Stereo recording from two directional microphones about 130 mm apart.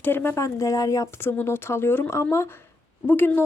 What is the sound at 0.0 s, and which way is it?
A woman's voice, 15° left (ahead or behind).